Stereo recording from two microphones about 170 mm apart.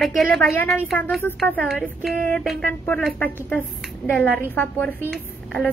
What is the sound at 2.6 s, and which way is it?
A woman's voice, 10° left (ahead or behind).